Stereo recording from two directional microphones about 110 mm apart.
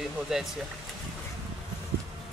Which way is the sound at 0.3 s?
5° right (ahead or behind).